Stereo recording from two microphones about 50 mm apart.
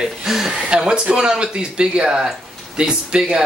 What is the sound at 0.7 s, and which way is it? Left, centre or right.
Speech, centre.